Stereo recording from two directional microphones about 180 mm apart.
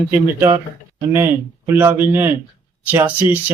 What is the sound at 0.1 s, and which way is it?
Speech, 15° right (ahead or behind).